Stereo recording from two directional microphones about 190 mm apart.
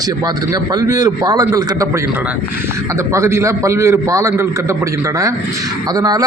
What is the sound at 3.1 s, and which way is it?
A man's voice, 15° right (ahead or behind).